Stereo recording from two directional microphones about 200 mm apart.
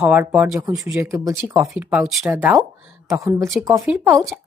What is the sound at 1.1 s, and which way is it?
Speech, 15° right (ahead or behind).